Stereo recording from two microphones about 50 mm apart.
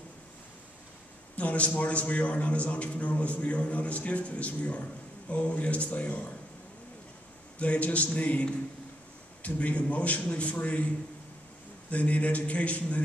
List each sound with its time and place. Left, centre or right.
1.3 s a man's voice: left
7.5 s a man's voice: left
11.9 s a man's voice: left